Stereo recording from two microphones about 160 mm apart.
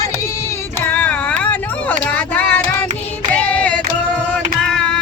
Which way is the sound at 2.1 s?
10° left (ahead or behind).